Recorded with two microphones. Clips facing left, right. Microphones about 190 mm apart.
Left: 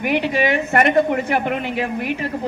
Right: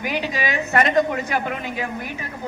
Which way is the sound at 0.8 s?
20° left (ahead or behind).